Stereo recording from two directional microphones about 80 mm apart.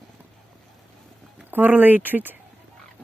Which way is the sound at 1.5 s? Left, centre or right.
Right.